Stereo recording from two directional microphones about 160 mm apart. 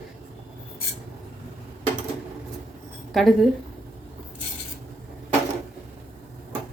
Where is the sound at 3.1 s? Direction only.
Centre (ahead or behind).